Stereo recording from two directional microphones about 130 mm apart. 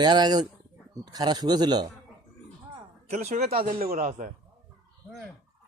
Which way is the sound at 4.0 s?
90° right.